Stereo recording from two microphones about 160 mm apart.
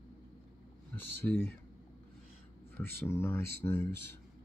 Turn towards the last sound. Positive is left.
turn(degrees=15)  # may be behind; listen again after turning